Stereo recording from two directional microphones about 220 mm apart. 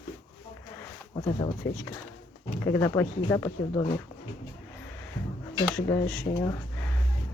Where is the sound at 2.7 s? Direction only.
10° left (ahead or behind).